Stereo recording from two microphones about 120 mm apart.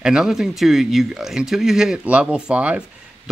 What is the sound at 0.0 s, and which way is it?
Speech, 5° right (ahead or behind).